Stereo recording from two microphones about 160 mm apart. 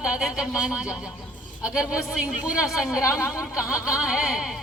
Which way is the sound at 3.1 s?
15° left (ahead or behind).